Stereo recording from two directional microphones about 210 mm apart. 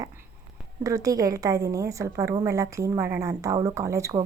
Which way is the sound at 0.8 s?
15° right (ahead or behind).